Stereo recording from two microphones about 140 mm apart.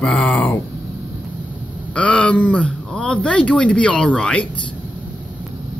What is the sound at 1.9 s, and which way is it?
Speech, 5° left (ahead or behind).